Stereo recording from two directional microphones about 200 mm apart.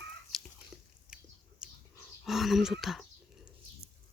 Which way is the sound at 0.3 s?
Centre (ahead or behind).